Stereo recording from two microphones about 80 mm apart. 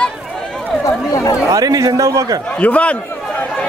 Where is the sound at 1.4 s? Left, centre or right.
Right.